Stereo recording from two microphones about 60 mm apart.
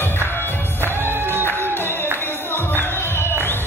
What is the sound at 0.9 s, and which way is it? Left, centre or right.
Music, right.